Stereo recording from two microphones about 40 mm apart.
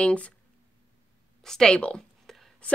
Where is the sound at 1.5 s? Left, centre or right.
Centre.